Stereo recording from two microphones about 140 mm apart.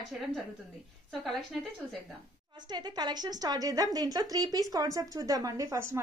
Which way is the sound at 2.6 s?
30° right (ahead or behind).